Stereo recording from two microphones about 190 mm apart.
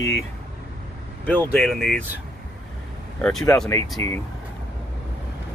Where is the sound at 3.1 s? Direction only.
5° left (ahead or behind).